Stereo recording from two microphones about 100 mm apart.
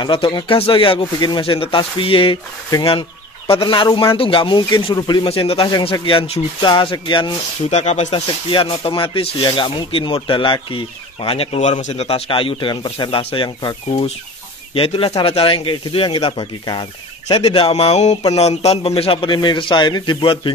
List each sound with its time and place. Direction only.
0.0 s speech: 55° left (ahead or behind)
5.3 s speech: 70° left (ahead or behind)
5.7 s speech: 45° left (ahead or behind); by 6.4 s 75° left (ahead or behind)
6.6 s speech: 55° left (ahead or behind)
7.7 s speech: 90° left; by 10.8 s 55° left (ahead or behind)
11.2 s speech: 75° left (ahead or behind)
13.6 s speech: 45° left (ahead or behind)
14.7 s speech: 70° left (ahead or behind)
15.2 s speech: 70° left (ahead or behind)
17.3 s speech: 85° left; by 20.5 s 55° left (ahead or behind)